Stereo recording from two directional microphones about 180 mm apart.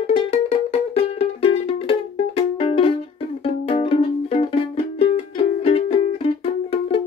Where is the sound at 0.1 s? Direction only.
35° left (ahead or behind).